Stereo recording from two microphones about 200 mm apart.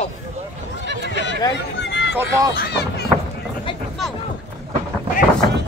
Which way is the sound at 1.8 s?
60° left (ahead or behind).